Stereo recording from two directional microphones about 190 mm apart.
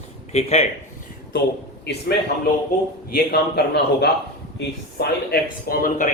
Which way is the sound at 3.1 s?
60° left (ahead or behind).